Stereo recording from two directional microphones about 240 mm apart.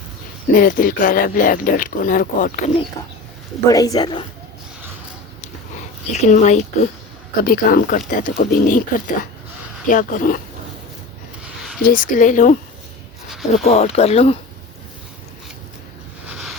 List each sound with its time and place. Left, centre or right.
0.5 s speech: left
3.7 s speech: centre
6.1 s speech: left
11.8 s speech: left
13.2 s a sound: centre
13.7 s speech: left
16.2 s boat: centre